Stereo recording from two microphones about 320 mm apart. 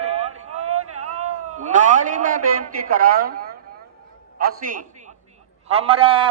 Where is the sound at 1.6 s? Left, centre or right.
Right.